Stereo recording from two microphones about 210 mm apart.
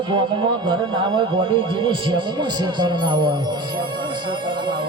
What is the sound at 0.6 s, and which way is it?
Speech, 25° right (ahead or behind).